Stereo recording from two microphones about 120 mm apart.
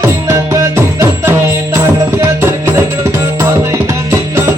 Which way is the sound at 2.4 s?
20° right (ahead or behind).